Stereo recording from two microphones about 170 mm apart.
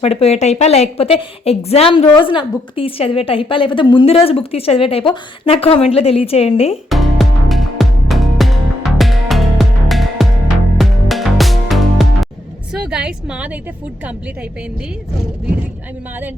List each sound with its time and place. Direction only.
0.0 s a woman's voice: 35° left (ahead or behind)
6.9 s music: centre (ahead or behind)
12.7 s a woman's voice: 5° right (ahead or behind)